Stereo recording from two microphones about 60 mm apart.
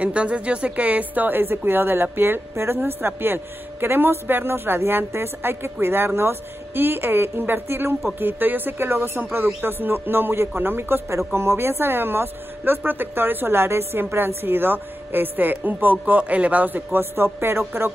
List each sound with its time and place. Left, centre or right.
0.0 s speech: right
11.1 s speech: right